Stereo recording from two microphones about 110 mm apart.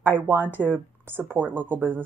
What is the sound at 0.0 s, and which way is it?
Speech, 20° right (ahead or behind).